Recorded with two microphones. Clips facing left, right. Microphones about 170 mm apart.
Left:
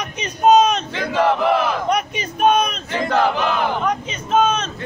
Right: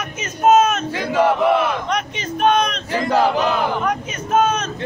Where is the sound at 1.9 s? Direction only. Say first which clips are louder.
Left 1 dB; 10° left (ahead or behind).